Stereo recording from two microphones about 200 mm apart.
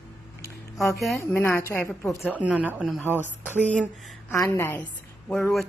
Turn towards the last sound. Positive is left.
turn(degrees=5)  # may be behind; listen again after turning